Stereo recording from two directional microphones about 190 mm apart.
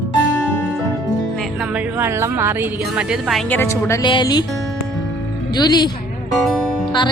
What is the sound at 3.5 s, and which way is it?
Speech, 15° left (ahead or behind).